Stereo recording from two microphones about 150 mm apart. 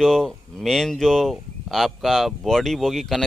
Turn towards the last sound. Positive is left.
turn(degrees=0)  # may be behind; listen again after turning